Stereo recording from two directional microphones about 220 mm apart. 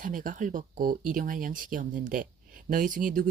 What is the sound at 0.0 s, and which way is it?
Speech, 40° right (ahead or behind).